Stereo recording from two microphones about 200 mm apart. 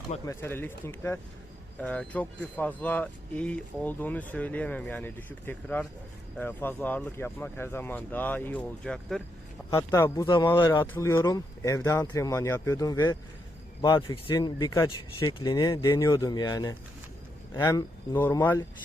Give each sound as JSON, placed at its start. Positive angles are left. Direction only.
{"t": 0.3, "sound": "speech", "side_deg": 10}
{"t": 9.6, "sound": "speech", "side_deg": 15}